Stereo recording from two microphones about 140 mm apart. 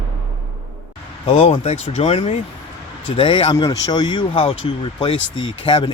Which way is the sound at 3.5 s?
25° left (ahead or behind).